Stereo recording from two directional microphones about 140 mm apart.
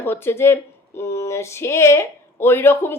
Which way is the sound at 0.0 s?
15° left (ahead or behind).